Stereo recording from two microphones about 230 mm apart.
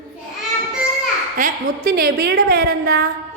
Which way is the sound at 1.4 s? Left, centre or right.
Right.